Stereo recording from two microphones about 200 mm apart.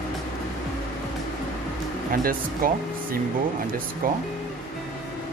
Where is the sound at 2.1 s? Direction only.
45° right (ahead or behind).